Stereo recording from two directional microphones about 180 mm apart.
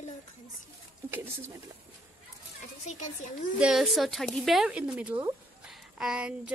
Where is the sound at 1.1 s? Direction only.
10° right (ahead or behind).